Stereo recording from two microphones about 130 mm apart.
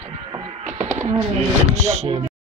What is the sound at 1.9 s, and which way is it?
Speech, 55° right (ahead or behind).